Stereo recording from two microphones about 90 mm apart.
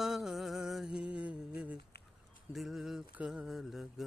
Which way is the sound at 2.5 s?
Centre (ahead or behind).